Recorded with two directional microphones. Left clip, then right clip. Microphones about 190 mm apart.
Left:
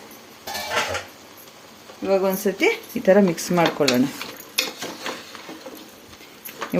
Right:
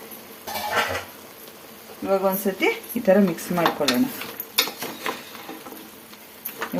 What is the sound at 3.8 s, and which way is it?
Speech, 35° left (ahead or behind).